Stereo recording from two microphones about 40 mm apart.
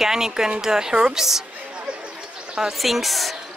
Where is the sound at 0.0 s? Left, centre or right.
Centre.